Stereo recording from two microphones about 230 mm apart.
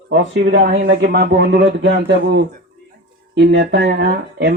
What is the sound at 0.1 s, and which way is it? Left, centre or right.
Speech, right.